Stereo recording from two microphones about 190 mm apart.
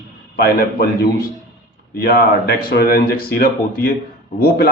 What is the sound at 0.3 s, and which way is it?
Speech, 55° left (ahead or behind).